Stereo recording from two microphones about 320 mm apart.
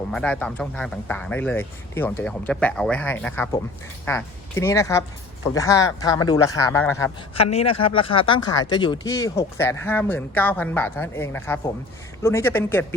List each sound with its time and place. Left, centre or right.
0.1 s speech: centre